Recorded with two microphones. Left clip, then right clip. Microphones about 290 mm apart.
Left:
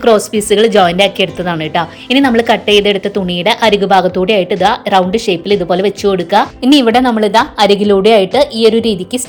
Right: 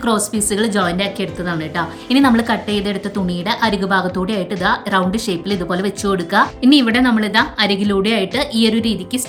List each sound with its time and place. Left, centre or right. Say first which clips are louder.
0.0 s a woman's voice: left 9 dB; centre